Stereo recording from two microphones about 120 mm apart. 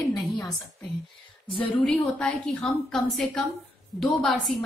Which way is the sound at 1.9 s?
5° left (ahead or behind).